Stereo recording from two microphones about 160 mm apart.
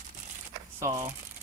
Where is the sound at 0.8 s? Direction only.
15° right (ahead or behind).